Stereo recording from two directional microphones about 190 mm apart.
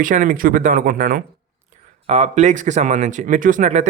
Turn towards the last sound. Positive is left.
turn(degrees=-40)  # may be behind; listen again after turning